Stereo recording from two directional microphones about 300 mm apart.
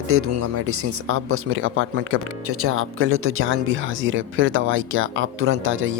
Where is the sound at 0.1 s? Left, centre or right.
Right.